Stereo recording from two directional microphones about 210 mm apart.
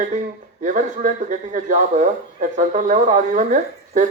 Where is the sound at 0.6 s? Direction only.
35° right (ahead or behind).